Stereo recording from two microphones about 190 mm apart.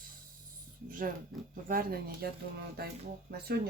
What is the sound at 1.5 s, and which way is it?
Speech, 50° right (ahead or behind).